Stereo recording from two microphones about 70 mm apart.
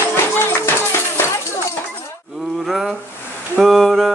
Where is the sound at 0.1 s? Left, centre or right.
Left.